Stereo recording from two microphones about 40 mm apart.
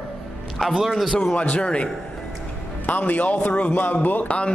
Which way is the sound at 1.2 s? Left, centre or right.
Left.